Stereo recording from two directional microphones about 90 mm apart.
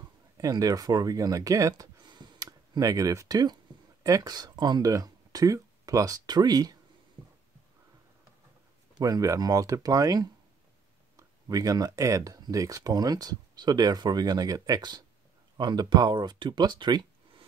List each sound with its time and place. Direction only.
0.4 s speech: 40° right (ahead or behind)
2.0 s a sound: 55° right (ahead or behind)
4.0 s speech: 45° right (ahead or behind)
9.0 s speech: 40° right (ahead or behind); by 17.0 s 55° right (ahead or behind)